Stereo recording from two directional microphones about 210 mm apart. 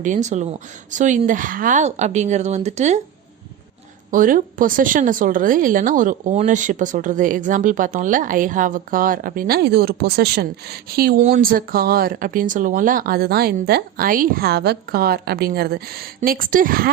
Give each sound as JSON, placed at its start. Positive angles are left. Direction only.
{"t": 0.0, "sound": "speech", "side_deg": -35}
{"t": 4.1, "sound": "speech", "side_deg": -40}